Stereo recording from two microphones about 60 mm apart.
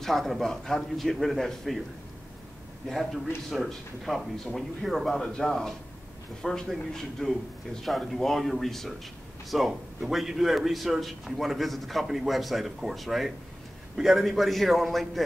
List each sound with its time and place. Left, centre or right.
0.0 s a man's voice: centre
2.9 s a man's voice: centre